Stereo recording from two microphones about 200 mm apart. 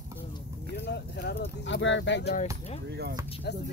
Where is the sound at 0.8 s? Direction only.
55° left (ahead or behind).